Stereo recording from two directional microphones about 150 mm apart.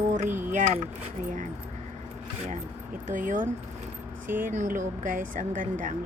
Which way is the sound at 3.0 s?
60° right (ahead or behind).